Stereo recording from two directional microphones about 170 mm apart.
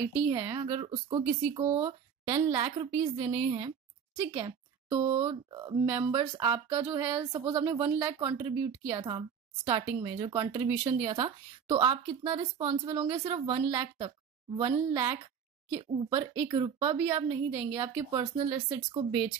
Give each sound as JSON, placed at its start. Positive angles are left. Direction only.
{"t": 0.3, "sound": "speech", "side_deg": -25}
{"t": 4.9, "sound": "speech", "side_deg": -30}
{"t": 10.9, "sound": "speech", "side_deg": -40}
{"t": 11.1, "sound": "speech", "side_deg": -25}
{"t": 18.2, "sound": "speech", "side_deg": -35}